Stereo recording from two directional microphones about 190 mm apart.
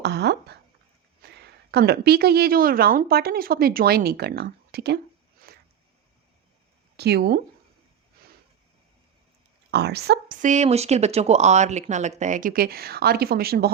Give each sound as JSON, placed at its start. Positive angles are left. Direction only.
{"t": 0.0, "sound": "a woman's voice", "side_deg": -65}
{"t": 5.5, "sound": "a sound", "side_deg": -55}
{"t": 6.9, "sound": "a woman's voice", "side_deg": -60}
{"t": 9.7, "sound": "a woman's voice", "side_deg": -60}
{"t": 10.4, "sound": "speech", "side_deg": -40}